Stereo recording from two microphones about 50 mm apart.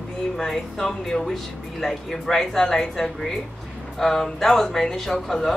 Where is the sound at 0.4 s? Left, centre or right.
Centre.